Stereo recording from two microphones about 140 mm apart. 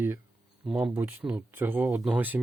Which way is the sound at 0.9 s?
15° right (ahead or behind).